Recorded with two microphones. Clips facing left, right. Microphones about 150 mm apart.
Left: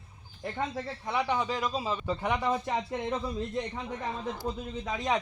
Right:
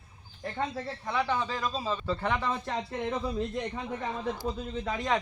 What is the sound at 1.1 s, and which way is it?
Speech, 20° left (ahead or behind).